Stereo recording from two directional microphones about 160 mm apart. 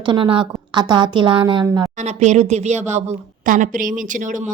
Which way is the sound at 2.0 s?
45° right (ahead or behind).